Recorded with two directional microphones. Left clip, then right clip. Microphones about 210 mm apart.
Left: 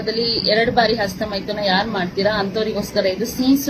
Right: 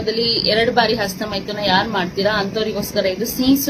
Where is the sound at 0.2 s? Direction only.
40° right (ahead or behind).